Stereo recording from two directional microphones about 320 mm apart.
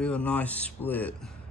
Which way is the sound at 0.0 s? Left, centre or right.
Centre.